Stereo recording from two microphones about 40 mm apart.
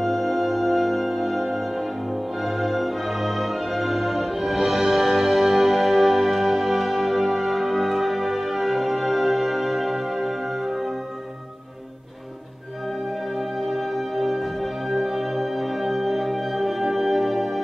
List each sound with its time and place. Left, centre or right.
0.0 s music: centre
13.6 s music: centre